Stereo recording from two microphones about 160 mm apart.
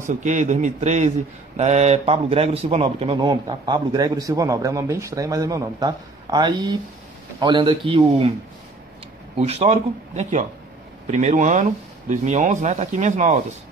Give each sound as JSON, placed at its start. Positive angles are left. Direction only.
{"t": 0.2, "sound": "a man's voice", "side_deg": -50}
{"t": 9.4, "sound": "speech", "side_deg": -40}